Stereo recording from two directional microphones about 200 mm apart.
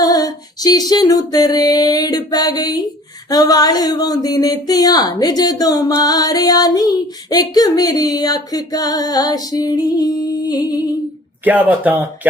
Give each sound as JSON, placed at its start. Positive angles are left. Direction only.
{"t": 0.0, "sound": "speech", "side_deg": 20}
{"t": 11.4, "sound": "speech", "side_deg": -10}